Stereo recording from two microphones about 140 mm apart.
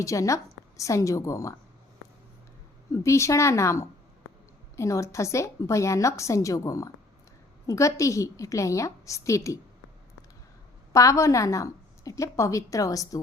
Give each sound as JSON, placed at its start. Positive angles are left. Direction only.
{"t": 0.0, "sound": "a woman's voice", "side_deg": 20}
{"t": 2.9, "sound": "a woman's voice", "side_deg": 20}
{"t": 10.9, "sound": "a woman's voice", "side_deg": 20}